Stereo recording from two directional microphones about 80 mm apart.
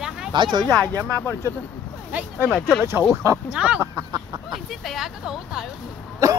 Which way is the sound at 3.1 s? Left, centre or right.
Right.